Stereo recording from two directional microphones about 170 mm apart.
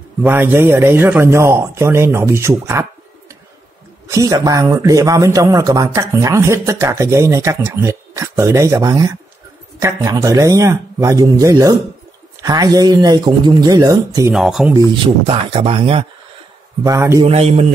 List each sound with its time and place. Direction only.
0.2 s a man's voice: 15° right (ahead or behind)
4.1 s speech: 20° right (ahead or behind)
14.3 s speech: centre (ahead or behind)
15.0 s speech: 30° right (ahead or behind)
16.8 s a man's voice: 20° right (ahead or behind)
17.2 s speech: 35° right (ahead or behind)